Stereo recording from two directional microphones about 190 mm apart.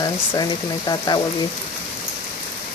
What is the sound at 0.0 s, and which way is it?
Speech, 20° left (ahead or behind).